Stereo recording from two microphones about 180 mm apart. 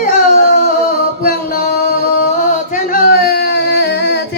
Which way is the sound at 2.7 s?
50° left (ahead or behind).